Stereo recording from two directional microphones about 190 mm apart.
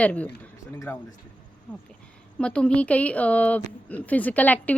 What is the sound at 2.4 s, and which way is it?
A woman's voice, 5° left (ahead or behind).